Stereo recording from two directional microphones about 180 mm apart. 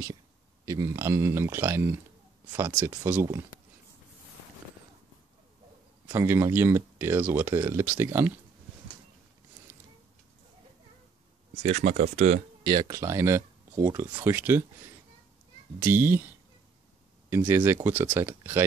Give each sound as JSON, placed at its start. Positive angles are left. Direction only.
{"t": 0.7, "sound": "speech", "side_deg": -15}
{"t": 6.0, "sound": "speech", "side_deg": -15}
{"t": 11.6, "sound": "speech", "side_deg": -40}
{"t": 12.6, "sound": "speech", "side_deg": -25}
{"t": 15.8, "sound": "speech", "side_deg": -10}
{"t": 17.3, "sound": "speech", "side_deg": -10}